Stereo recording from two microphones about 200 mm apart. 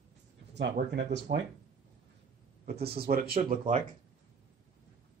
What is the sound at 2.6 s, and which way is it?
Speech, 50° right (ahead or behind).